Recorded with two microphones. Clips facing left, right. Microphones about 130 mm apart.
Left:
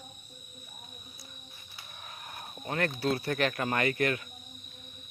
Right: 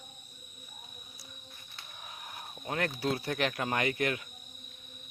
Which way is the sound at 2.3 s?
5° right (ahead or behind).